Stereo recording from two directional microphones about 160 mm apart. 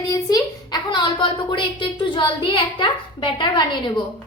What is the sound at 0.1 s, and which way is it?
A woman's voice, 25° left (ahead or behind).